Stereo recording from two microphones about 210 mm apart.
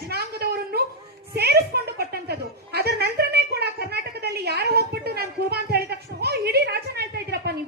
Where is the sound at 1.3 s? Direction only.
50° right (ahead or behind).